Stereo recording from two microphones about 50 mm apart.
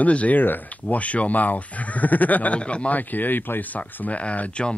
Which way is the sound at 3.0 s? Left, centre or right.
Left.